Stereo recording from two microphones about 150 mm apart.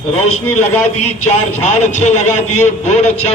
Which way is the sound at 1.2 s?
50° left (ahead or behind).